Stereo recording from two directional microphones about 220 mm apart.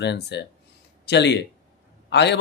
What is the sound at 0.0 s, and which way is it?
Speech, 50° left (ahead or behind).